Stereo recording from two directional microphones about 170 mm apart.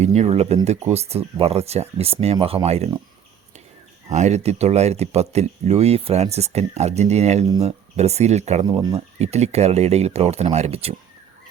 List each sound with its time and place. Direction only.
0.0 s speech: 40° right (ahead or behind)
4.1 s speech: 40° right (ahead or behind)
8.6 s speech: 20° right (ahead or behind)
9.1 s speech: 40° right (ahead or behind)